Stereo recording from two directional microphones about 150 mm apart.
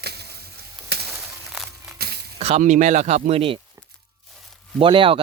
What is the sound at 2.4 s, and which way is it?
Speech, 50° right (ahead or behind).